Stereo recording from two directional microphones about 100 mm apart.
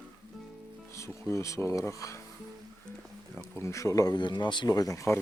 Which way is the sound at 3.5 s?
30° left (ahead or behind).